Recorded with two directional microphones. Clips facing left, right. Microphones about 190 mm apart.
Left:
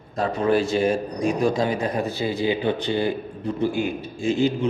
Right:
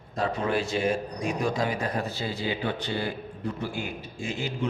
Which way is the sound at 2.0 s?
15° left (ahead or behind).